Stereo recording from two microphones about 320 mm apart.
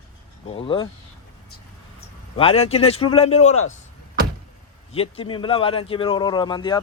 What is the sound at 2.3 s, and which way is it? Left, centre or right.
A man's voice, centre.